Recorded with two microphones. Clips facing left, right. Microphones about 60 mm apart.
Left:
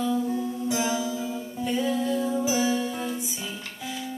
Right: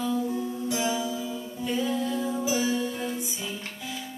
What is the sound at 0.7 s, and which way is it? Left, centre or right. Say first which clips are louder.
Music: left 1 dB; left.